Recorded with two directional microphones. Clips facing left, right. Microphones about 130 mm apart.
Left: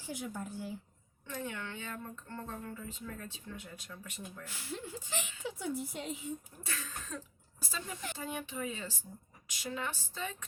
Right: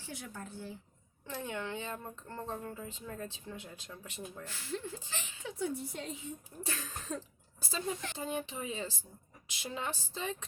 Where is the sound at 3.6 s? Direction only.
25° right (ahead or behind).